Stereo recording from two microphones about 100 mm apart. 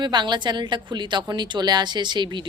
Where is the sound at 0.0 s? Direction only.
50° right (ahead or behind).